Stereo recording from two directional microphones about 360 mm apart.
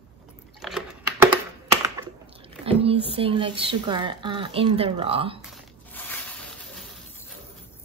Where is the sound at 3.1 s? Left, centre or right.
Centre.